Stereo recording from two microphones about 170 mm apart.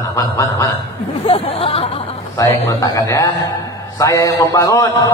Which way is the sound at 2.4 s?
20° left (ahead or behind).